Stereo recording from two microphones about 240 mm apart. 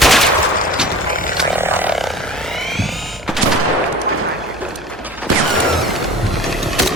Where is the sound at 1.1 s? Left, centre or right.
Left.